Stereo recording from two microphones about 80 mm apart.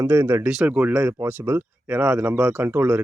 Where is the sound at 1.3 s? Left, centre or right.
Right.